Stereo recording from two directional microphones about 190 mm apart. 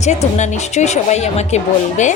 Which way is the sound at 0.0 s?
35° left (ahead or behind).